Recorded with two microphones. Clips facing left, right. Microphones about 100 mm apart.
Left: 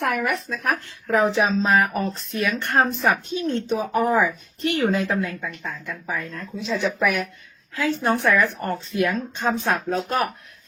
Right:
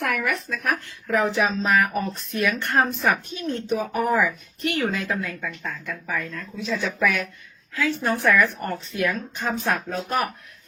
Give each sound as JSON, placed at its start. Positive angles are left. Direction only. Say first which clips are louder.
{"t": 0.0, "sound": "speech", "louder": "left 2 dB", "side_deg": 20}
{"t": 2.4, "sound": "speech", "louder": "left 1 dB", "side_deg": 20}
{"t": 5.4, "sound": "speech", "louder": "even", "side_deg": 5}
{"t": 5.8, "sound": "speech", "louder": "even", "side_deg": 20}
{"t": 6.2, "sound": "speech", "louder": "left 1 dB", "side_deg": 30}